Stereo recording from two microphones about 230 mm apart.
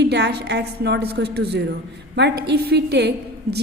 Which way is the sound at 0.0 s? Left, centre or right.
Right.